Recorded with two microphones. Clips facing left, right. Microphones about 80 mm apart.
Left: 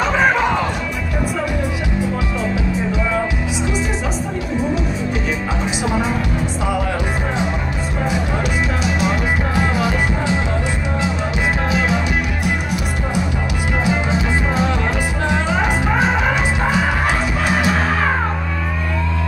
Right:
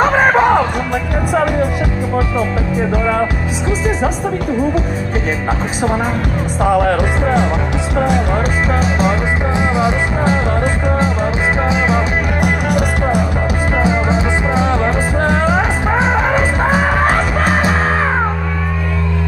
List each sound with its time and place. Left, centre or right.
0.0 s music: right
6.6 s music: right
11.7 s music: right
12.4 s music: right
13.8 s music: right
16.0 s music: right